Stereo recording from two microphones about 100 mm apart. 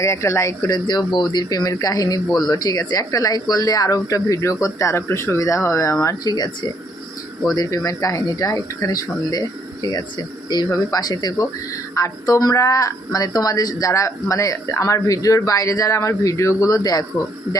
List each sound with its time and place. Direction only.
0.0 s speech: 30° left (ahead or behind)
0.7 s speech: 45° left (ahead or behind)
2.2 s speech: centre (ahead or behind)
2.5 s speech: 40° left (ahead or behind)
10.5 s speech: 40° left (ahead or behind)